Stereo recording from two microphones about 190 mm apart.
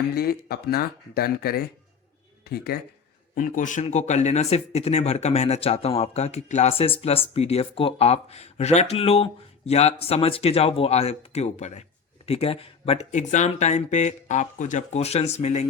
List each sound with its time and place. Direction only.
0.1 s speech: 55° left (ahead or behind)
3.3 s speech: 45° left (ahead or behind)